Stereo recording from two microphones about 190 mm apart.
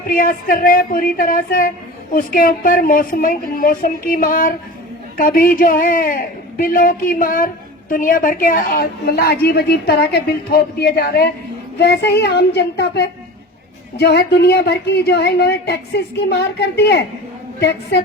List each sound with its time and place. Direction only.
0.1 s a man's voice: 50° left (ahead or behind)